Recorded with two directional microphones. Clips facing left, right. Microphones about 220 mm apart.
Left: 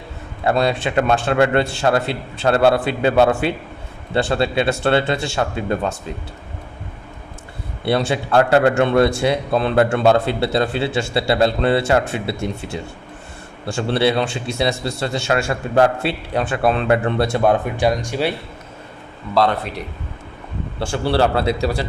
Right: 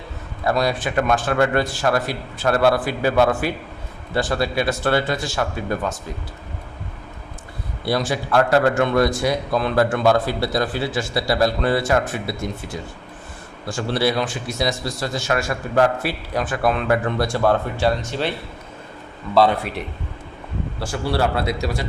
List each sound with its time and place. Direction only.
0.4 s a man's voice: 25° left (ahead or behind)
7.9 s a man's voice: 25° left (ahead or behind)
19.3 s speech: 5° right (ahead or behind)
20.7 s a man's voice: 30° left (ahead or behind)